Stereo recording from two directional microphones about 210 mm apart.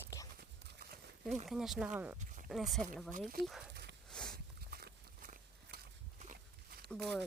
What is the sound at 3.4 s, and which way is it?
Speech, 50° right (ahead or behind).